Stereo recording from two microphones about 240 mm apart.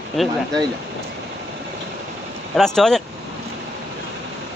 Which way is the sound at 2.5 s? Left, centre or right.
Centre.